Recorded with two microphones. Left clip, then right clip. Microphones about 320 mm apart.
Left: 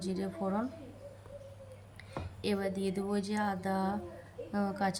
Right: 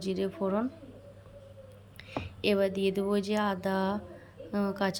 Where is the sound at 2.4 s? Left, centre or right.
Centre.